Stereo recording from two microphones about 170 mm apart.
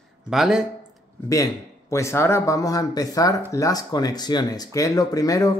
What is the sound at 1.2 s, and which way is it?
Speech, 20° left (ahead or behind).